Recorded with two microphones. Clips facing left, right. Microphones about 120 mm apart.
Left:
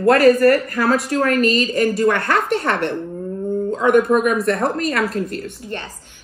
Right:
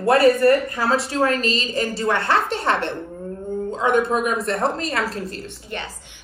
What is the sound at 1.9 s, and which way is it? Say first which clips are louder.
Speech: left 3 dB; 25° right (ahead or behind).